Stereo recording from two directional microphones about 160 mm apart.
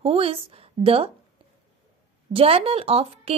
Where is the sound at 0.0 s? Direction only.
35° right (ahead or behind).